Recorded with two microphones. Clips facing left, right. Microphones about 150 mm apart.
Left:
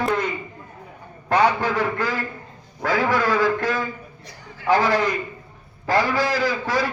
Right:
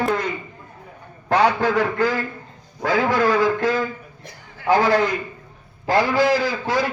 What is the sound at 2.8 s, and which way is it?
A man's voice, 20° right (ahead or behind).